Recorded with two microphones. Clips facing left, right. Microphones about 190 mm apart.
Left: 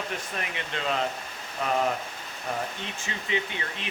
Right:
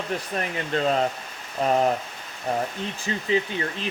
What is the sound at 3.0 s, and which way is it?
Speech, 35° right (ahead or behind).